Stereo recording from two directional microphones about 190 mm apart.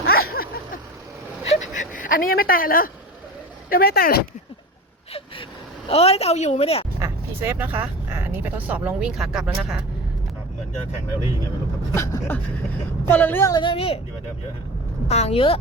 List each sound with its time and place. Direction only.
0.0 s a sound: 55° left (ahead or behind)
1.5 s a sound: 40° left (ahead or behind)
3.7 s speech: 50° left (ahead or behind)
5.9 s a woman's voice: 30° left (ahead or behind)
7.0 s speech: 10° right (ahead or behind)
11.9 s gasp: 15° left (ahead or behind)
13.1 s a woman's voice: 10° left (ahead or behind); by 14.0 s 30° left (ahead or behind)
15.0 s a woman's voice: 35° left (ahead or behind)